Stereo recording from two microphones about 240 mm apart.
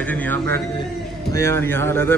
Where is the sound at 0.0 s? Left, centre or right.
Centre.